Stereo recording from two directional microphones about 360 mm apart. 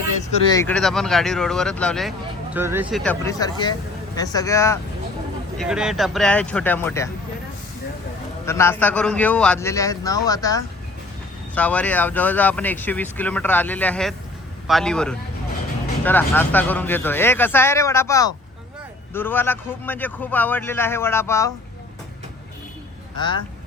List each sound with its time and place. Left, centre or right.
0.2 s speech: centre
8.4 s a man's voice: centre
23.1 s speech: centre